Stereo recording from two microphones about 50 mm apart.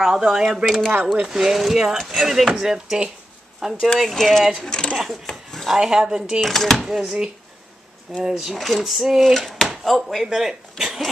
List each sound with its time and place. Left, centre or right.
0.0 s speech: centre
1.1 s speech: centre
4.6 s speech: centre
4.9 s a sound: centre
5.8 s speech: centre
6.4 s speech: centre
6.8 s speech: centre